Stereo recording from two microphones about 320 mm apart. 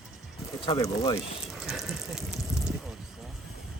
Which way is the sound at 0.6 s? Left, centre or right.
Centre.